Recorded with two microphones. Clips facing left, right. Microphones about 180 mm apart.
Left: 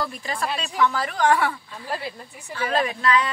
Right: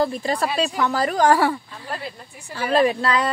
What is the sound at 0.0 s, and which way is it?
A woman's voice, 30° right (ahead or behind).